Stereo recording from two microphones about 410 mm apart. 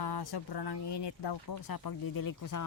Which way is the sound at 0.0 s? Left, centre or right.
Left.